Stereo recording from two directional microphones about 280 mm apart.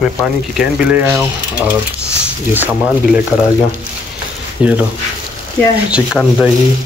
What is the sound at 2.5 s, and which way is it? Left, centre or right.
Speech, centre.